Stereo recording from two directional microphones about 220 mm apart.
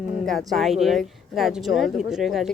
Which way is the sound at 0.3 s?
Centre (ahead or behind).